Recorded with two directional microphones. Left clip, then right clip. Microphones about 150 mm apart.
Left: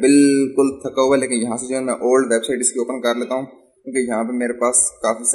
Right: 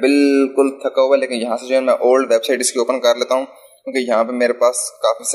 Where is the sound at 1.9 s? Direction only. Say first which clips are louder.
Right 3 dB; 20° right (ahead or behind).